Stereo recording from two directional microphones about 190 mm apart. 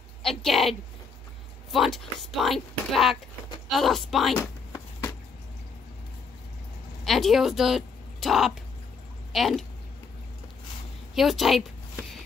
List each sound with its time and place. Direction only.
0.2 s a woman's voice: centre (ahead or behind)
4.4 s a sound: 15° left (ahead or behind)
7.1 s speech: centre (ahead or behind)
11.1 s a woman's voice: centre (ahead or behind)